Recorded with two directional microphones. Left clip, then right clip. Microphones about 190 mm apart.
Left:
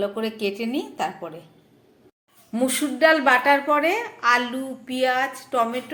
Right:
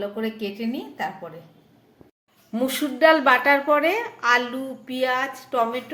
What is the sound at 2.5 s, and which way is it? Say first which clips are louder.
A woman's voice: left 1 dB; centre (ahead or behind).